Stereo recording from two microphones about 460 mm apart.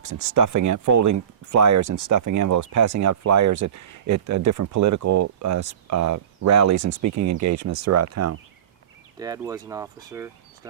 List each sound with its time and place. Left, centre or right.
0.3 s speech: right
9.1 s speech: centre